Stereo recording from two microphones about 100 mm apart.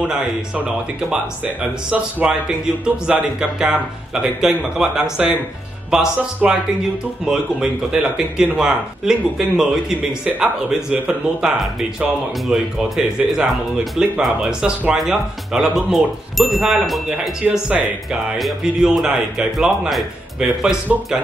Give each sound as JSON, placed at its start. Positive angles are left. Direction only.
{"t": 1.4, "sound": "speech", "side_deg": -15}